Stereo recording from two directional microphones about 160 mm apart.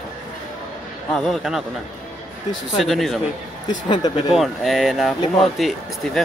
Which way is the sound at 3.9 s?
30° left (ahead or behind).